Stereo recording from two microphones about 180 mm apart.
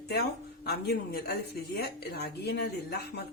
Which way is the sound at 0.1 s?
65° left (ahead or behind).